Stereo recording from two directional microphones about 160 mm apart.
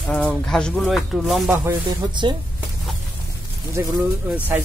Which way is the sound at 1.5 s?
15° right (ahead or behind).